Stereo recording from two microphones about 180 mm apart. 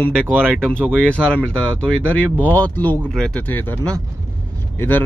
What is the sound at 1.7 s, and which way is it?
Speech, 10° left (ahead or behind).